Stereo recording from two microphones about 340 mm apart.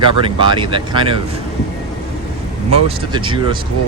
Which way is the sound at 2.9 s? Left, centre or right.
Centre.